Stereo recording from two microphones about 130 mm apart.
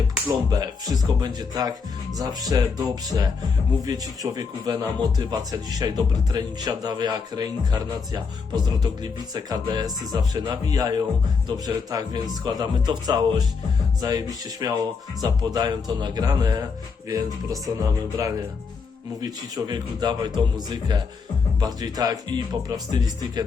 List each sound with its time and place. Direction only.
0.3 s speech: 30° right (ahead or behind)